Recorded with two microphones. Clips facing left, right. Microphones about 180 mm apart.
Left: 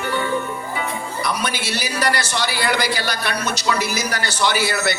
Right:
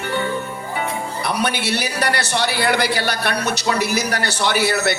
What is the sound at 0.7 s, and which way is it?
A man's voice, 60° right (ahead or behind).